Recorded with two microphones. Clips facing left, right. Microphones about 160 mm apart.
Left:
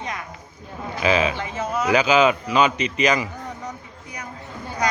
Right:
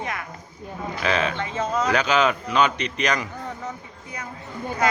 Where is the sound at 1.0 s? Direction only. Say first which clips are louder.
Left 4 dB; 5° left (ahead or behind).